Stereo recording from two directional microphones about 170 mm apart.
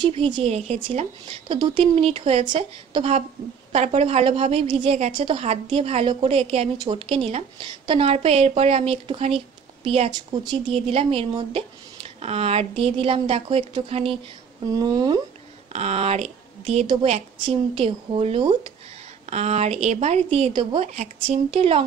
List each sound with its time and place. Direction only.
0.0 s speech: 30° right (ahead or behind)
14.7 s speech: 25° right (ahead or behind)
15.7 s speech: 40° right (ahead or behind)